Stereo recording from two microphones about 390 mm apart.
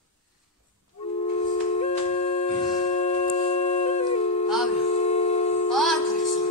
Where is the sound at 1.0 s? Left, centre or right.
Centre.